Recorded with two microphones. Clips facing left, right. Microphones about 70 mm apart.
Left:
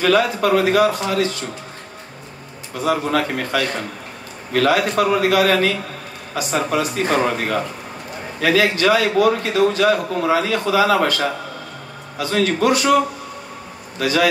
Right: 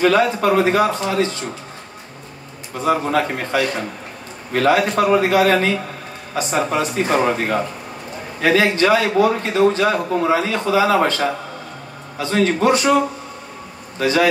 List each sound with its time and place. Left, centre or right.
0.0 s a man's voice: right
2.8 s a man's voice: right
8.4 s a man's voice: right
13.9 s speech: right